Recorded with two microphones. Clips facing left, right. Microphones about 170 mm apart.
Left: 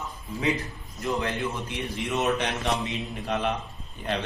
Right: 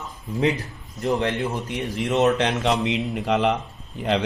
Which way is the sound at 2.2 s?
85° right.